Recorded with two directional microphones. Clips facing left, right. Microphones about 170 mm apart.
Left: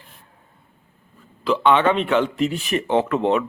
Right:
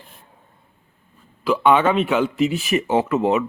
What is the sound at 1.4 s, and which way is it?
Speech, 10° right (ahead or behind).